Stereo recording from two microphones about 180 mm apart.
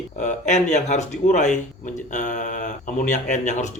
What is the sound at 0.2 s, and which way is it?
Speech, 40° left (ahead or behind).